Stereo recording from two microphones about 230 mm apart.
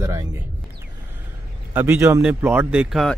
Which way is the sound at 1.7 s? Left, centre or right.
Centre.